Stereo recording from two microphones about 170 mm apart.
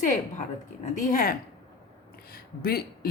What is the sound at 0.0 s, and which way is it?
A woman's voice, 45° left (ahead or behind).